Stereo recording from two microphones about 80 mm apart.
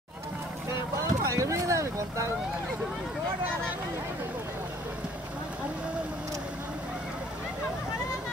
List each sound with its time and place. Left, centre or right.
0.7 s boat: right